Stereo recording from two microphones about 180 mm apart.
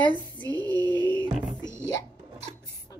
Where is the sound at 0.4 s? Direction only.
10° left (ahead or behind).